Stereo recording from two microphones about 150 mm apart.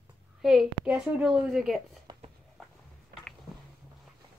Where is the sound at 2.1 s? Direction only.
30° right (ahead or behind).